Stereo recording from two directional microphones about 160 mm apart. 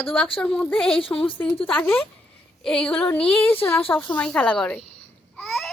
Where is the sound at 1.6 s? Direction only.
5° left (ahead or behind).